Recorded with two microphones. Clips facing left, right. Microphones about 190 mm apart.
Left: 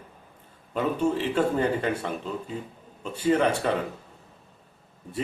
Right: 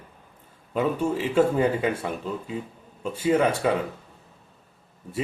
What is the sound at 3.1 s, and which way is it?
Speech, 10° right (ahead or behind).